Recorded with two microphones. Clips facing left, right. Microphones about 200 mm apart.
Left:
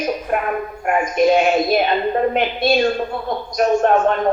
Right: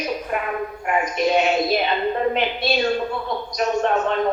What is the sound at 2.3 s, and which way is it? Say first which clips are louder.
A woman's voice: left 4 dB; 50° left (ahead or behind).